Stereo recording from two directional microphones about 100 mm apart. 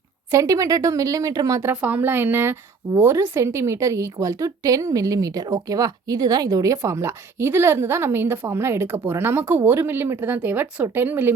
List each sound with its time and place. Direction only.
0.3 s a woman's voice: 35° right (ahead or behind)
1.7 s a woman's voice: 15° right (ahead or behind)